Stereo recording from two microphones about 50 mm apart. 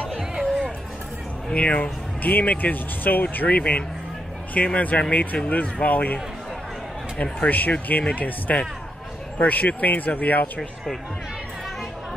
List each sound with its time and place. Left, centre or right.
1.5 s speech: left
7.2 s speech: left